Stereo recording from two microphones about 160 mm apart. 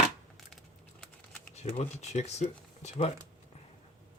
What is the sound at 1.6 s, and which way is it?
Speech, 45° left (ahead or behind).